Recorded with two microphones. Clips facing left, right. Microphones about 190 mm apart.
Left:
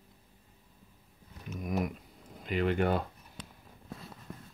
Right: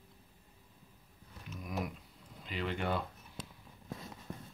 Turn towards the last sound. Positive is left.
turn(degrees=50)  # may be behind; listen again after turning